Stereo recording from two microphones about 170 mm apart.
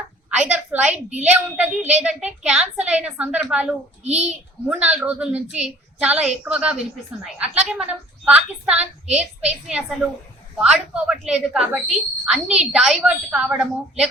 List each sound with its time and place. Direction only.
0.3 s a sound: 5° right (ahead or behind)
1.2 s a woman's voice: 10° right (ahead or behind)
4.0 s a child's voice: 40° right (ahead or behind)
4.7 s a woman's voice: 10° right (ahead or behind)